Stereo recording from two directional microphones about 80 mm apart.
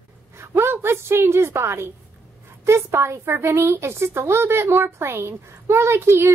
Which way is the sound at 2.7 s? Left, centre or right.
Right.